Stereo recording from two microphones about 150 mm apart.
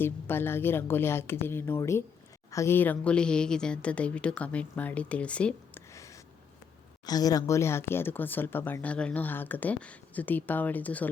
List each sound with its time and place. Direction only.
0.0 s speech: 15° left (ahead or behind)
5.9 s a sound: 20° left (ahead or behind)
7.0 s speech: 25° left (ahead or behind); by 11.1 s 10° left (ahead or behind)